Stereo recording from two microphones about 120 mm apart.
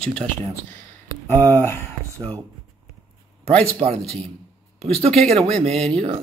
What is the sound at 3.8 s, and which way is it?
Speech, 55° right (ahead or behind).